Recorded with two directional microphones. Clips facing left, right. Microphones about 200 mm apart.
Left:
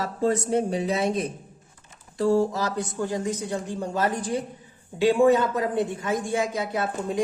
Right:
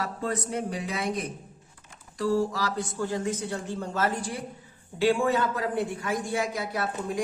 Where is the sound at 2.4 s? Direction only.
20° left (ahead or behind).